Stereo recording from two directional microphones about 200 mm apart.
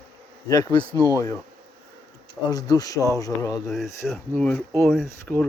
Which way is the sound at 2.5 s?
20° left (ahead or behind).